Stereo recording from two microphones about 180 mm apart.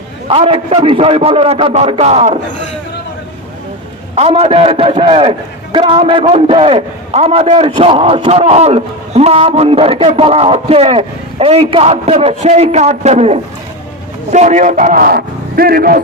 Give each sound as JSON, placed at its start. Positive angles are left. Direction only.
{"t": 0.3, "sound": "a man's voice", "side_deg": -30}
{"t": 4.1, "sound": "a man's voice", "side_deg": -35}